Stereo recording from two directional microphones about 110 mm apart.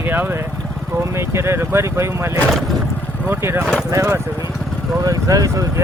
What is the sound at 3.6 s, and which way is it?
Speech, 5° left (ahead or behind).